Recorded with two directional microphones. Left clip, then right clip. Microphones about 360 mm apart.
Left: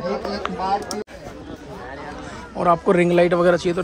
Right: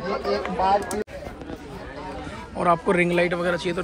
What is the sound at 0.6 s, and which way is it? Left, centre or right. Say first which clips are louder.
Speech: right 2 dB; right.